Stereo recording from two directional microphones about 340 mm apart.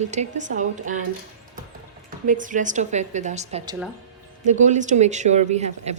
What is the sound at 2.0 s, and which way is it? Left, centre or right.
Speech, right.